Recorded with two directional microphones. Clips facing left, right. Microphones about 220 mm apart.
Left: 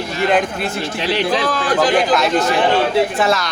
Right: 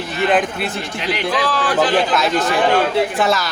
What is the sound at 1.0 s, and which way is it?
Speech, 30° left (ahead or behind).